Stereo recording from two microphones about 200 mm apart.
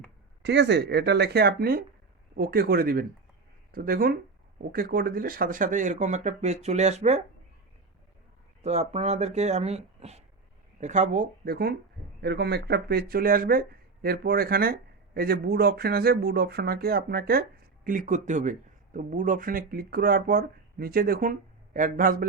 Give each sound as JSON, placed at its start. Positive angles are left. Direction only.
{"t": 0.4, "sound": "speech", "side_deg": -60}
{"t": 8.6, "sound": "speech", "side_deg": -35}